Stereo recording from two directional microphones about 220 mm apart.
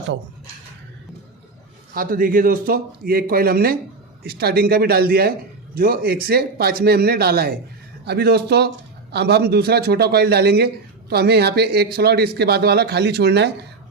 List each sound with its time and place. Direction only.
1.9 s a man's voice: 40° right (ahead or behind)